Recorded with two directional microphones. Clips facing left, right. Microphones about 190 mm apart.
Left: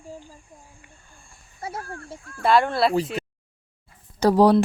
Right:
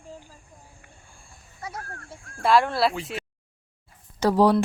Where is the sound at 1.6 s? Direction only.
30° left (ahead or behind).